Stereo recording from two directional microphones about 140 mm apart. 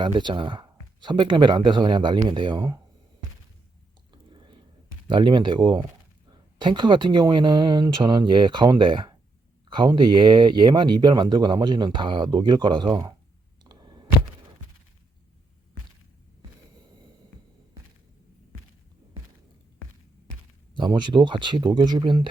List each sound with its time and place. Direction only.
0.0 s speech: 35° right (ahead or behind)
4.1 s whispering: 35° right (ahead or behind)
5.0 s speech: 35° right (ahead or behind)
13.7 s a sound: 30° right (ahead or behind)
20.7 s speech: 35° right (ahead or behind)